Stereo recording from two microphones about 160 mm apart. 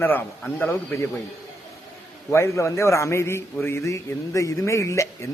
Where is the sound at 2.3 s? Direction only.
15° left (ahead or behind).